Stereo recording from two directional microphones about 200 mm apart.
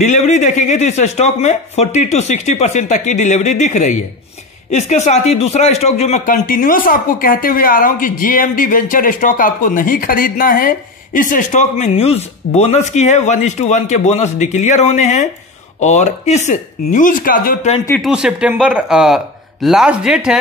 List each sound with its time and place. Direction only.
0.0 s speech: 35° left (ahead or behind)
18.0 s speech: 5° right (ahead or behind)